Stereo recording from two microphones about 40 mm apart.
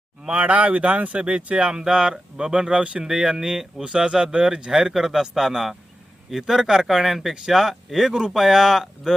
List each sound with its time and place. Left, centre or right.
0.3 s speech: right
1.7 s speech: centre
3.0 s speech: centre